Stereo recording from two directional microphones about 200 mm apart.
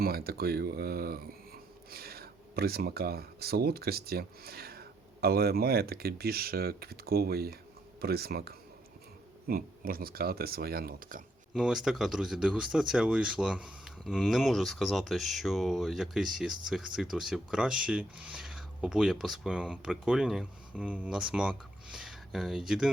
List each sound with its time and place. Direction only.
0.0 s speech: 50° right (ahead or behind)
11.5 s speech: 5° right (ahead or behind)